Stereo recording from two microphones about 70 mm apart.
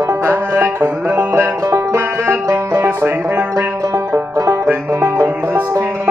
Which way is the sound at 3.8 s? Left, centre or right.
Right.